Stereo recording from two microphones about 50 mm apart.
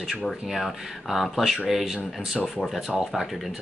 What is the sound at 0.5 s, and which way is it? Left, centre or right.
Speech, centre.